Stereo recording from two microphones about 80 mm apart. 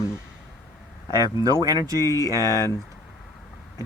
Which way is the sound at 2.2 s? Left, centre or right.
Right.